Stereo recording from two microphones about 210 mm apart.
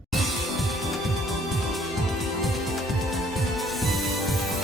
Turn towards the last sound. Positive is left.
turn(degrees=0)  # may be behind; listen again after turning